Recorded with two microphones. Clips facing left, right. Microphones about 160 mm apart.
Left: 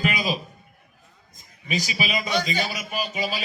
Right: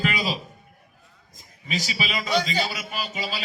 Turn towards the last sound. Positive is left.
turn(degrees=15)  # may be behind; listen again after turning